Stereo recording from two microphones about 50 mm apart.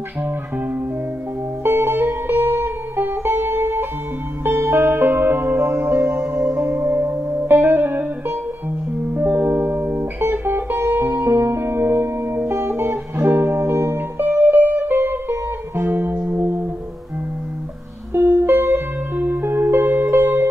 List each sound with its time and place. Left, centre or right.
1.6 s music: right
9.4 s music: right
14.1 s music: right
18.1 s music: right